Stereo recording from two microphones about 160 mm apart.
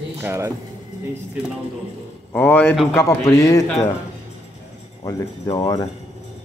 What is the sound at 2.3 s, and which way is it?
Speech, 10° left (ahead or behind).